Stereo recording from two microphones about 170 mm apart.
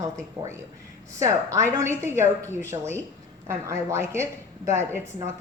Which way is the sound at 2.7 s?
30° right (ahead or behind).